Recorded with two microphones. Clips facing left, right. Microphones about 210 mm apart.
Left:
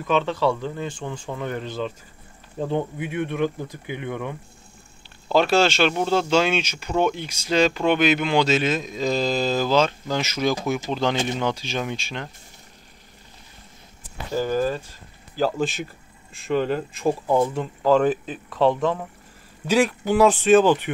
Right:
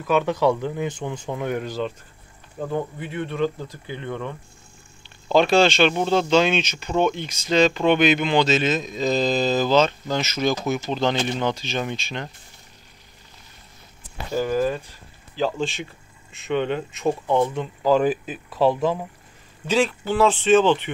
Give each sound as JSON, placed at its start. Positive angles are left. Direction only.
{"t": 0.0, "sound": "speech", "side_deg": -10}
{"t": 2.6, "sound": "speech", "side_deg": 25}
{"t": 3.0, "sound": "speech", "side_deg": 15}
{"t": 14.3, "sound": "speech", "side_deg": -5}
{"t": 15.3, "sound": "speech", "side_deg": 5}
{"t": 19.6, "sound": "speech", "side_deg": 10}